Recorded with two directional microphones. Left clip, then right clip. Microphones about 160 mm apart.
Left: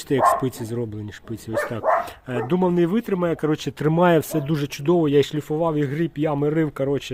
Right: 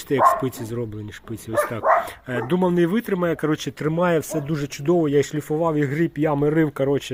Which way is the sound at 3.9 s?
35° left (ahead or behind).